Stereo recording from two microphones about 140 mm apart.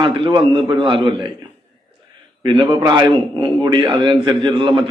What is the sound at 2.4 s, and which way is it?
A man's voice, 40° right (ahead or behind).